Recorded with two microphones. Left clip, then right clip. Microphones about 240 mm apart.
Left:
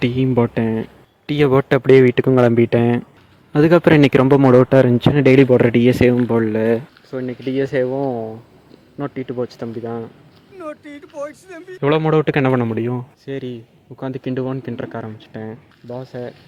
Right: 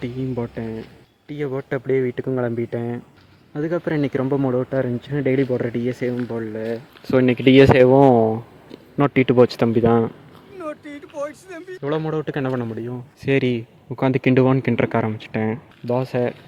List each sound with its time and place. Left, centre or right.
0.0 s a man's voice: left
7.1 s speech: right
10.6 s speech: centre
11.8 s speech: left
13.2 s speech: right